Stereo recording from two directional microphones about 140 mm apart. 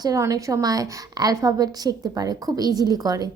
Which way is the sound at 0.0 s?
25° right (ahead or behind).